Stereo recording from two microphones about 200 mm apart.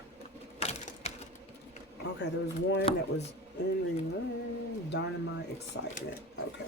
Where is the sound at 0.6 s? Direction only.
35° left (ahead or behind).